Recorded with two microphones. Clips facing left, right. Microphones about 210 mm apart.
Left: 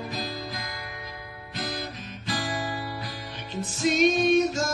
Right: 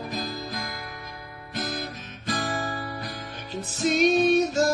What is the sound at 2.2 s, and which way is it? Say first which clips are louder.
Music: right 2 dB; 45° right (ahead or behind).